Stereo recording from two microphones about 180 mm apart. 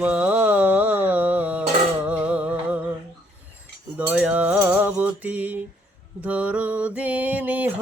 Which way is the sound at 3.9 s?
10° right (ahead or behind).